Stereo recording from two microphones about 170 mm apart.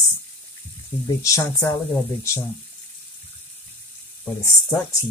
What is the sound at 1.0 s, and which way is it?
Speech, 20° left (ahead or behind).